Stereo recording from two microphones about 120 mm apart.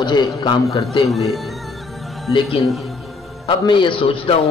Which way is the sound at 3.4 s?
45° left (ahead or behind).